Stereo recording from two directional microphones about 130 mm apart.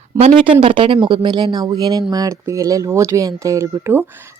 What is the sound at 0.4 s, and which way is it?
Speech, 40° right (ahead or behind).